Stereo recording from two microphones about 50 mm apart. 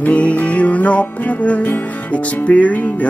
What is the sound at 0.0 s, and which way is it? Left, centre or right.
Music, left.